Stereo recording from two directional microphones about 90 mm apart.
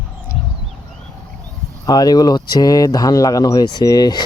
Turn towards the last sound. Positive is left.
turn(degrees=50)  # may be behind; listen again after turning